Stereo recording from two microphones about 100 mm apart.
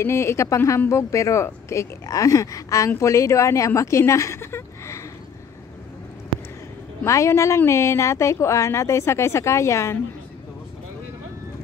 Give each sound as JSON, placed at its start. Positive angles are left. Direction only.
{"t": 0.0, "sound": "speech", "side_deg": 25}
{"t": 7.1, "sound": "speech", "side_deg": 30}